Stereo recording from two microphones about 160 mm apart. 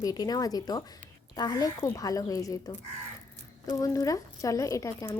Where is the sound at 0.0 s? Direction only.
25° left (ahead or behind).